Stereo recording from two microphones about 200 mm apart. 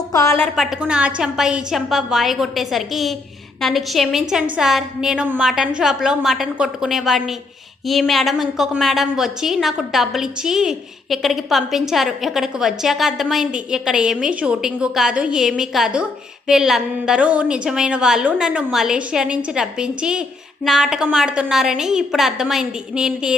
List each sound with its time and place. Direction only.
0.1 s a woman's voice: 15° left (ahead or behind)
0.4 s a woman's voice: centre (ahead or behind)